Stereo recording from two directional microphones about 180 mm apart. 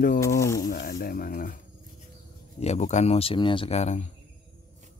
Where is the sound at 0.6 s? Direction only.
50° left (ahead or behind).